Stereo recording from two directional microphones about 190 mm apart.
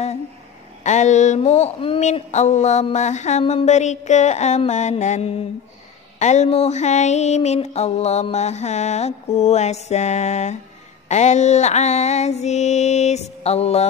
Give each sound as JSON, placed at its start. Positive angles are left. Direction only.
{"t": 0.8, "sound": "speech", "side_deg": 40}